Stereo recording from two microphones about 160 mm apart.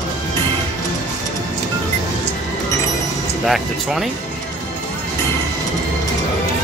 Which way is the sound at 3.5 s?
Centre (ahead or behind).